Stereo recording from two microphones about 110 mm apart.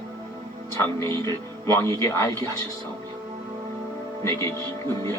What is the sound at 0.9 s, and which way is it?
Speech, 25° left (ahead or behind).